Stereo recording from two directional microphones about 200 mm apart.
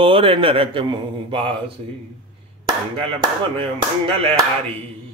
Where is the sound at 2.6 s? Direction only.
25° right (ahead or behind).